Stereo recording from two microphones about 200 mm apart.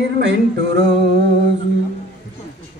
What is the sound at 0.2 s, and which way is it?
Speech, 60° right (ahead or behind).